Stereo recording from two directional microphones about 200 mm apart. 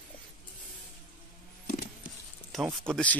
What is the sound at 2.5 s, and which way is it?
Speech, centre (ahead or behind).